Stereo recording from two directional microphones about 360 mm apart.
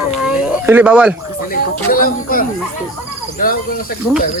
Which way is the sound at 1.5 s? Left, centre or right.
Left.